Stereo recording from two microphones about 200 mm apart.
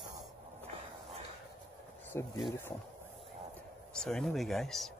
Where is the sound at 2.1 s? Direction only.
15° left (ahead or behind).